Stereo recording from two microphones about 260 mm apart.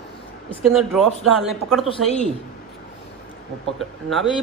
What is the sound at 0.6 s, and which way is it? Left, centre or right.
A man's voice, centre.